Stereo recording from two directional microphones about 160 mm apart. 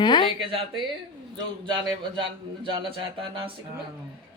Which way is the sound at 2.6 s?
35° right (ahead or behind).